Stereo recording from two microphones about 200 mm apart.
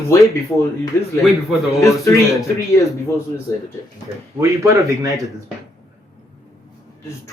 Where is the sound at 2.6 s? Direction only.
15° left (ahead or behind).